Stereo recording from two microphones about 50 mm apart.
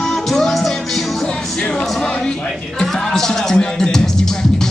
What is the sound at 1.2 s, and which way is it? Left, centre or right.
Music, centre.